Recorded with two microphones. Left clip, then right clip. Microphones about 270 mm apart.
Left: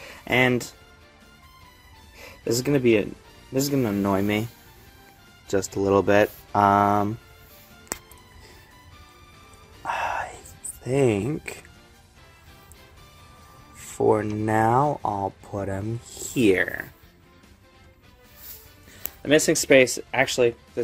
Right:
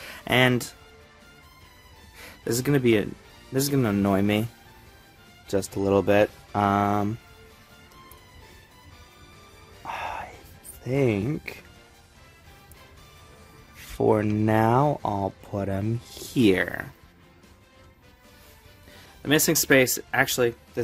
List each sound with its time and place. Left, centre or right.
0.1 s speech: centre
2.2 s speech: centre
5.9 s speech: centre
9.8 s music: centre
10.8 s speech: centre
13.9 s speech: centre
19.2 s speech: centre